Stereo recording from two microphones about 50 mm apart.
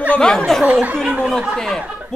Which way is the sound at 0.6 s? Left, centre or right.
Right.